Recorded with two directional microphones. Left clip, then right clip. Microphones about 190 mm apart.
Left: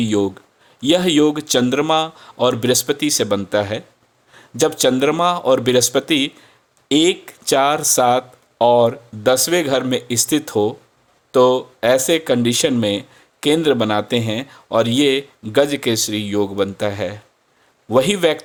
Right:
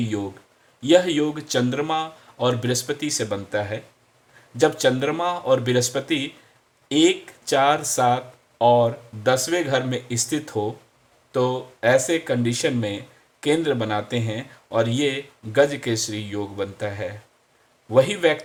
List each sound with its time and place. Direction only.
0.0 s speech: 45° left (ahead or behind)